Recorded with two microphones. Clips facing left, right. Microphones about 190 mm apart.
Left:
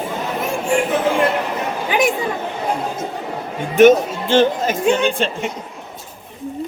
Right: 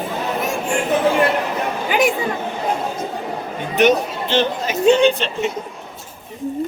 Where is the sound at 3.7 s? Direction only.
50° left (ahead or behind).